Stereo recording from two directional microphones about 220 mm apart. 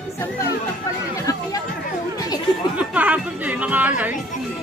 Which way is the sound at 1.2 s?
15° left (ahead or behind).